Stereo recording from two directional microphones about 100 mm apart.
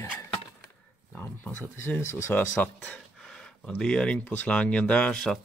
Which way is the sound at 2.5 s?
15° left (ahead or behind).